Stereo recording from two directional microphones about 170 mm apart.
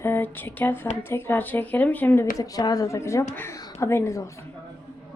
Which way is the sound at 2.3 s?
20° left (ahead or behind).